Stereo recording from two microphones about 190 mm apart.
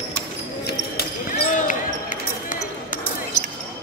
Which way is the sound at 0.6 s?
55° left (ahead or behind).